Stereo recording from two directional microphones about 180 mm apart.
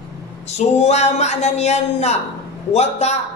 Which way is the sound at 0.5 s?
40° left (ahead or behind).